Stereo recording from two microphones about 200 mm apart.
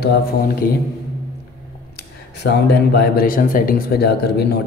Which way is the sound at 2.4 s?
55° left (ahead or behind).